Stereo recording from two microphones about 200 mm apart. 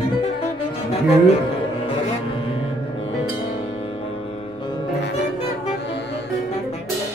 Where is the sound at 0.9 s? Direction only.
30° left (ahead or behind).